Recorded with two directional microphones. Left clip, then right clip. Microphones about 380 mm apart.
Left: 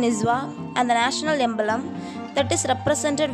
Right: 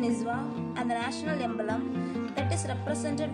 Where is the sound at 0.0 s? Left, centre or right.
Left.